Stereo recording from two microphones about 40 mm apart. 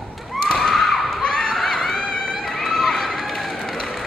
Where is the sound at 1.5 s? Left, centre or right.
Centre.